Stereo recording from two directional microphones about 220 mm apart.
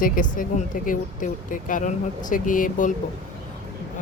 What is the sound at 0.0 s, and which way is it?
Speech, 35° left (ahead or behind).